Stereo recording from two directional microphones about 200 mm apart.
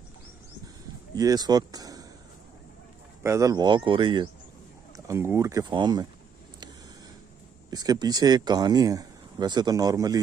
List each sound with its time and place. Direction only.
1.1 s speech: 20° right (ahead or behind)
3.2 s speech: 15° right (ahead or behind)
7.7 s speech: 20° right (ahead or behind)